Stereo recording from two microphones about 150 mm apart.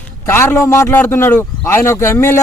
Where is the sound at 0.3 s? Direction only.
15° left (ahead or behind).